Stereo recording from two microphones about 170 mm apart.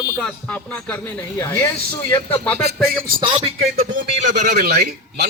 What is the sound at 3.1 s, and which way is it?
Speech, 30° right (ahead or behind).